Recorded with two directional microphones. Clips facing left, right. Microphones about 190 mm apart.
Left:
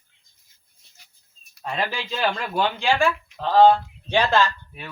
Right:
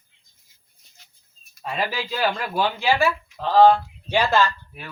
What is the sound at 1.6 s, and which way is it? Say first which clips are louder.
Speech: right 1 dB; 5° right (ahead or behind).